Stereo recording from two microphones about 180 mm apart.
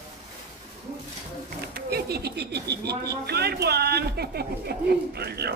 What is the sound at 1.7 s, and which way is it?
Speech, 60° right (ahead or behind).